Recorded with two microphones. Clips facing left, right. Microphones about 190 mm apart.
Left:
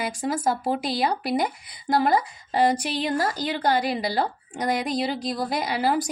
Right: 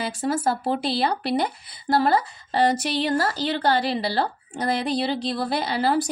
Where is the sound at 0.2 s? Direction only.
10° left (ahead or behind).